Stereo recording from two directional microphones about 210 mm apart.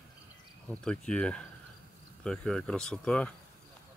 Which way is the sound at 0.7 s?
5° left (ahead or behind).